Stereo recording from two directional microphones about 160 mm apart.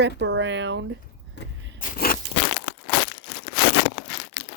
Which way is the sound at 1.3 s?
75° left (ahead or behind).